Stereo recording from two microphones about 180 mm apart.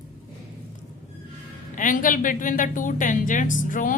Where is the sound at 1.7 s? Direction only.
45° left (ahead or behind).